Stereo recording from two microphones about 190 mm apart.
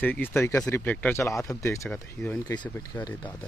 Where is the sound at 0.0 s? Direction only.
10° left (ahead or behind).